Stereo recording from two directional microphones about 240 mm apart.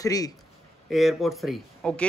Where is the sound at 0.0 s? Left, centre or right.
Centre.